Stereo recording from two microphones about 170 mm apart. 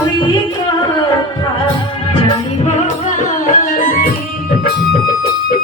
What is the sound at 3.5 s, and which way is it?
Music, 50° left (ahead or behind).